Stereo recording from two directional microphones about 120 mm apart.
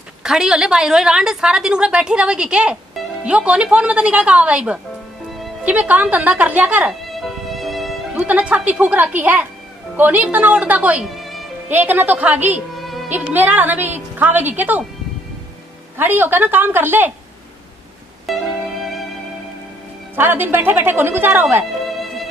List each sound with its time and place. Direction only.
0.2 s a woman's voice: 5° right (ahead or behind)
6.9 s music: centre (ahead or behind)
8.2 s a woman's voice: 10° right (ahead or behind)
11.1 s music: centre (ahead or behind)
11.7 s a woman's voice: 15° right (ahead or behind)
12.7 s music: centre (ahead or behind)
13.1 s a woman's voice: 15° right (ahead or behind)
16.0 s a woman's voice: 15° right (ahead or behind)
18.2 s music: centre (ahead or behind)
20.2 s a woman's voice: 15° right (ahead or behind)
21.9 s music: centre (ahead or behind)